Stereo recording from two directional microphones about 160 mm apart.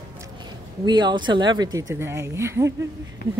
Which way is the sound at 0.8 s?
25° right (ahead or behind).